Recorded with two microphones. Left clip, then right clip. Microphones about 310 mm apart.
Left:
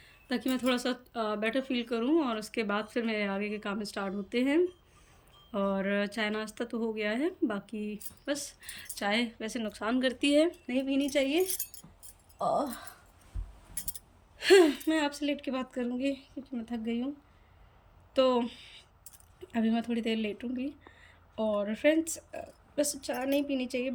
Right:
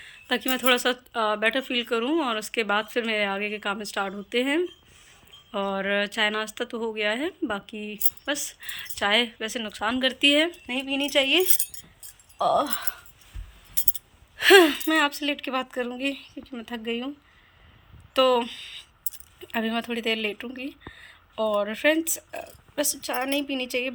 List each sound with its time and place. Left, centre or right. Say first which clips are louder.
0.0 s speech: right 7 dB; centre
12.5 s speech: right 7 dB; centre
13.8 s speech: right 8 dB; centre
18.1 s speech: right 6 dB; centre